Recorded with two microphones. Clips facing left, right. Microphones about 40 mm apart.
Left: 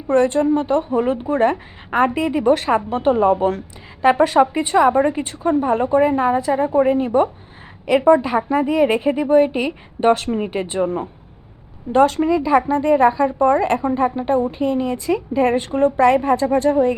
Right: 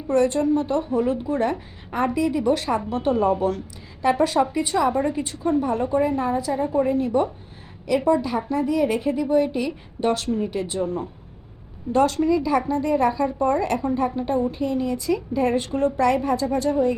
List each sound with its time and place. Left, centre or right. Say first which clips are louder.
0.1 s a woman's voice: left 4 dB; left